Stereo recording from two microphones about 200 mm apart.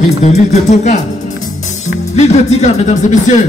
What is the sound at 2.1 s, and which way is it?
A child's voice, 35° left (ahead or behind).